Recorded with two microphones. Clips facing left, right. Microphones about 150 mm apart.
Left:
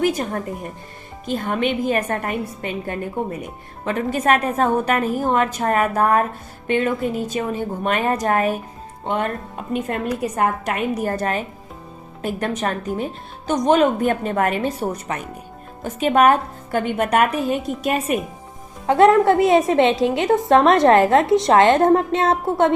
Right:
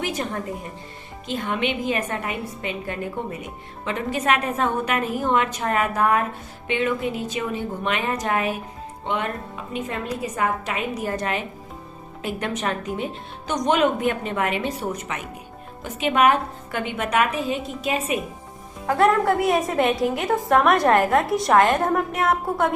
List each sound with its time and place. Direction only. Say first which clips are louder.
0.0 s a woman's voice: left 6 dB; 45° left (ahead or behind)
9.7 s a woman's voice: left 5 dB; 55° left (ahead or behind)
18.9 s a woman's voice: left 5 dB; 25° left (ahead or behind)